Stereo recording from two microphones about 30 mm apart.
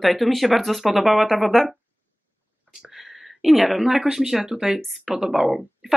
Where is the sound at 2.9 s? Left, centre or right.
Centre.